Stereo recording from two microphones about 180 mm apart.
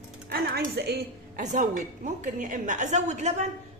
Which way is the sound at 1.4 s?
45° right (ahead or behind).